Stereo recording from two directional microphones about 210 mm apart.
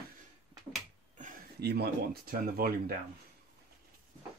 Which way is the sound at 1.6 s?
50° right (ahead or behind).